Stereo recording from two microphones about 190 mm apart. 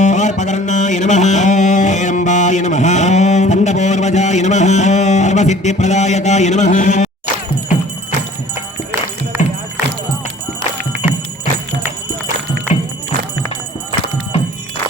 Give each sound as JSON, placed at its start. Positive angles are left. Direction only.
{"t": 0.0, "sound": "music", "side_deg": 40}
{"t": 8.9, "sound": "music", "side_deg": -15}
{"t": 10.9, "sound": "music", "side_deg": -75}